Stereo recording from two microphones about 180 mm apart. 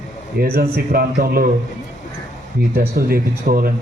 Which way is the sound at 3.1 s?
55° right (ahead or behind).